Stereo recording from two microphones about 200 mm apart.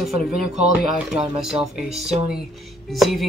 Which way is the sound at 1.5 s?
30° right (ahead or behind).